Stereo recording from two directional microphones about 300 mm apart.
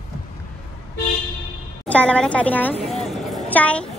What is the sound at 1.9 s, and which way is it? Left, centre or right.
Speech, centre.